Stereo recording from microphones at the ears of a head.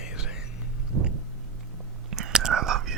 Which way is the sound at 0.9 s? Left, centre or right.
Right.